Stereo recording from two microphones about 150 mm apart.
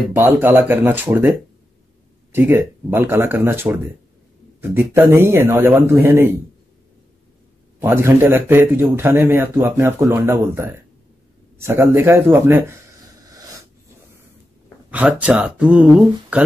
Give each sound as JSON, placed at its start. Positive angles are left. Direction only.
{"t": 0.1, "sound": "a man's voice", "side_deg": -15}
{"t": 2.3, "sound": "a man's voice", "side_deg": -15}
{"t": 7.8, "sound": "a man's voice", "side_deg": -15}
{"t": 14.9, "sound": "a man's voice", "side_deg": -10}